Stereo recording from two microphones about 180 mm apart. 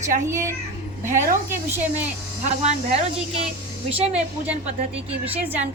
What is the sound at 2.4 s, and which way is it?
A woman's voice, 40° right (ahead or behind).